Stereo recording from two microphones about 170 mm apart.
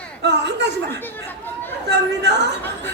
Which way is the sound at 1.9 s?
90° right.